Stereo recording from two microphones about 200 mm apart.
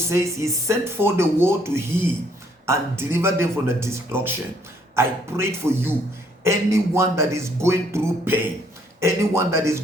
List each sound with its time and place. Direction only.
0.1 s speech: 15° right (ahead or behind)